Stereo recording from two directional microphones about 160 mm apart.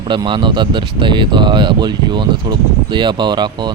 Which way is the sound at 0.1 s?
30° right (ahead or behind).